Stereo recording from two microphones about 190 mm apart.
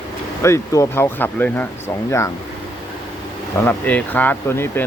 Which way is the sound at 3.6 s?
10° left (ahead or behind).